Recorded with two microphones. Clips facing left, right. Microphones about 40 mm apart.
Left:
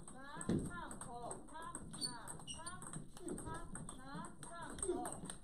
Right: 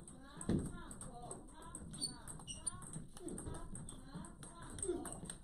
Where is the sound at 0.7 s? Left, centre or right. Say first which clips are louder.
Left 5 dB; left.